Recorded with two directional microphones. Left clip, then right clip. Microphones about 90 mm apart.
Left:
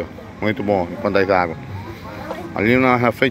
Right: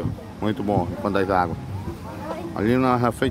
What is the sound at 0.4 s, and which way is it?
Speech, 10° right (ahead or behind).